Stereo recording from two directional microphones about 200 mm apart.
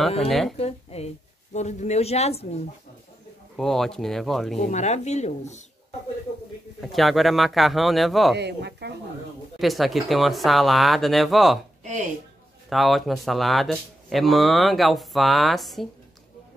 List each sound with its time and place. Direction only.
0.3 s speech: centre (ahead or behind)
0.6 s speech: 30° left (ahead or behind)
3.5 s speech: centre (ahead or behind)
4.6 s speech: 35° left (ahead or behind)
6.8 s speech: centre (ahead or behind)
8.4 s speech: 55° right (ahead or behind)
9.6 s speech: centre (ahead or behind)
11.8 s speech: 35° right (ahead or behind)
12.6 s speech: centre (ahead or behind)